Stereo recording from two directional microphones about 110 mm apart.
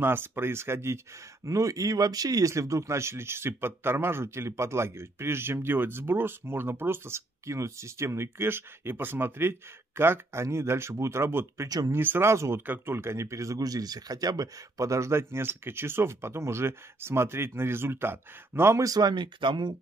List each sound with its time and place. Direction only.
0.0 s speech: 20° right (ahead or behind)
11.9 s speech: 20° right (ahead or behind); by 19.7 s 45° right (ahead or behind)